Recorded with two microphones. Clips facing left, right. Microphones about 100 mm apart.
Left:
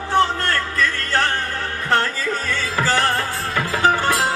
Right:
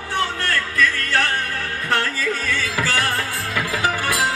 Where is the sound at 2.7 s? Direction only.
40° left (ahead or behind).